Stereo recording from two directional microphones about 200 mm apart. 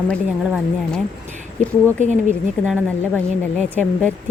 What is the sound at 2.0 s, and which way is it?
Speech, 35° right (ahead or behind).